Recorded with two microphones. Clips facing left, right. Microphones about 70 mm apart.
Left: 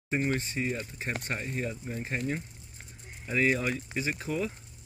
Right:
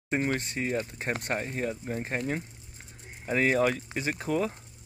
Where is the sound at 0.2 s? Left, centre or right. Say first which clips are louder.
Right 1 dB; right.